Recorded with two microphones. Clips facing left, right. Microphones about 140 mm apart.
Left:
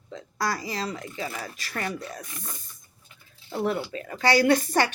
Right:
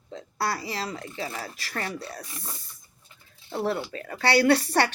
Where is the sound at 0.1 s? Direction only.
30° right (ahead or behind).